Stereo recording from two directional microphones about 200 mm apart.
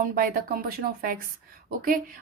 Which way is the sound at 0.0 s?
45° right (ahead or behind).